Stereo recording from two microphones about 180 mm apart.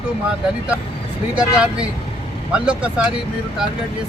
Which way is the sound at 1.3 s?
5° right (ahead or behind).